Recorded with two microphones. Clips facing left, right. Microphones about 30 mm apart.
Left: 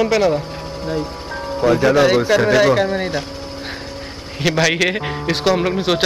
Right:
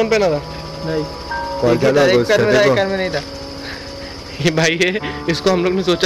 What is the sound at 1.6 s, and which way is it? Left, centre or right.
Speech, centre.